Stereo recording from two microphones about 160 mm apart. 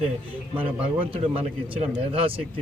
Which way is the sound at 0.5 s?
10° right (ahead or behind).